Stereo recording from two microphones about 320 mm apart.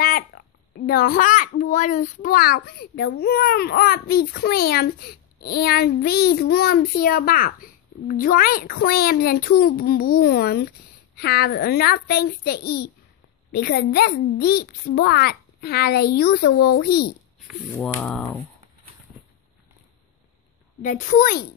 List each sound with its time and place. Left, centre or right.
0.0 s a child's voice: left
17.7 s a sound: centre
20.8 s a child's voice: left